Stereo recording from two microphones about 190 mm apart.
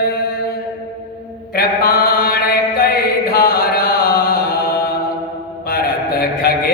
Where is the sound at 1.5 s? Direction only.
55° left (ahead or behind).